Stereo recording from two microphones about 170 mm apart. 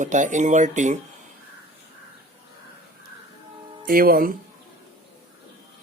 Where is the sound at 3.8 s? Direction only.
55° right (ahead or behind).